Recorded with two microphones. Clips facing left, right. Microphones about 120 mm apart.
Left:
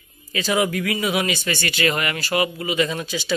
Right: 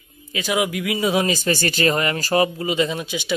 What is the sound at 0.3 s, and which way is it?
Speech, 15° right (ahead or behind).